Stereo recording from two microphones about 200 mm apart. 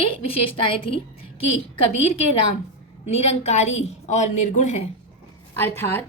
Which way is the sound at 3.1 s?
35° left (ahead or behind).